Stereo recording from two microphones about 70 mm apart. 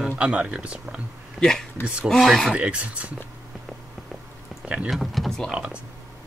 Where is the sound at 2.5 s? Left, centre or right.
Centre.